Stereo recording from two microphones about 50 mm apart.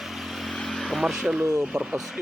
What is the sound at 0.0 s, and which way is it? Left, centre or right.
Vehicle, centre.